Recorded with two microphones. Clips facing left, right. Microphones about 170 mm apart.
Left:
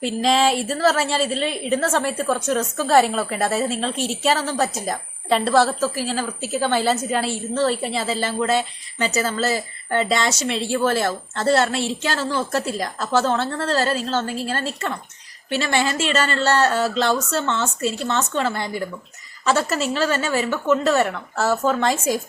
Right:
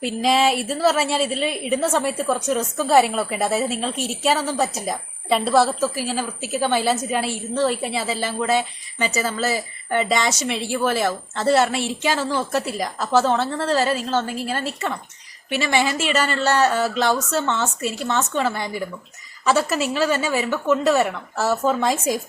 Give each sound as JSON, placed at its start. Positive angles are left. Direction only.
{"t": 0.0, "sound": "a woman's voice", "side_deg": -10}